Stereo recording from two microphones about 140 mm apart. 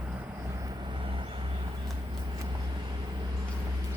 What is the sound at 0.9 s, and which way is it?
Vehicle, 35° right (ahead or behind).